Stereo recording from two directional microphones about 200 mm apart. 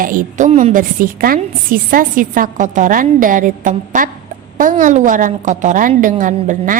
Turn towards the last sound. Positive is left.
turn(degrees=-40)  # may be behind; listen again after turning